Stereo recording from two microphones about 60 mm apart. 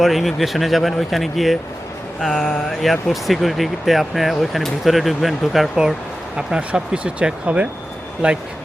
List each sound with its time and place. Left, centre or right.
0.0 s speech: centre
2.2 s a sound: centre
2.8 s speech: centre
6.3 s speech: centre